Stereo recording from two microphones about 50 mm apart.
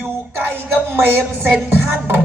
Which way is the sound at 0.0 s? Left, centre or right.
Right.